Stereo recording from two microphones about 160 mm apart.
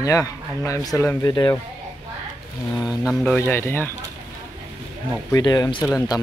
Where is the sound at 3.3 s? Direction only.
15° left (ahead or behind).